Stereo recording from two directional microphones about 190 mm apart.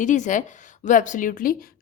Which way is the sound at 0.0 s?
40° left (ahead or behind).